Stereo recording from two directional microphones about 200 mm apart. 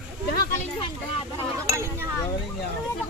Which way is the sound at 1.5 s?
15° right (ahead or behind).